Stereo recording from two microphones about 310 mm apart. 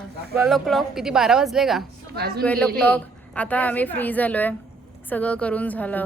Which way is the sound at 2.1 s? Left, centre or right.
Right.